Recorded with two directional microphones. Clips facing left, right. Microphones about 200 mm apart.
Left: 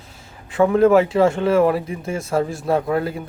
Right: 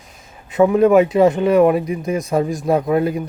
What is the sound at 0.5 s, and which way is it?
Speech, 20° right (ahead or behind).